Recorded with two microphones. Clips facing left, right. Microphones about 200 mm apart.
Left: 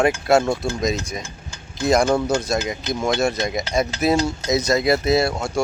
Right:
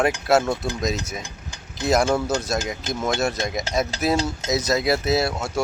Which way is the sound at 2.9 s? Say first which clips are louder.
Left 3 dB; 45° right (ahead or behind).